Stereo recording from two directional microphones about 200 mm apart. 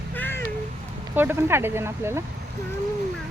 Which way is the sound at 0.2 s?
10° left (ahead or behind).